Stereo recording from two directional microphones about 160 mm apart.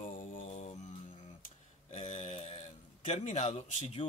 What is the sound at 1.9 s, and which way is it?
Speech, 45° left (ahead or behind).